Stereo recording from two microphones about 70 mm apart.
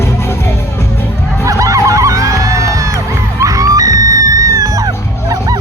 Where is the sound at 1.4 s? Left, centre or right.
Right.